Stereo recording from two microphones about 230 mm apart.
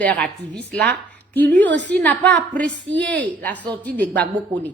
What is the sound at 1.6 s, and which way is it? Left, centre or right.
Speech, right.